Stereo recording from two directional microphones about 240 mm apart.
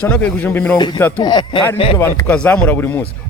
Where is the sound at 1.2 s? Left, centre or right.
Centre.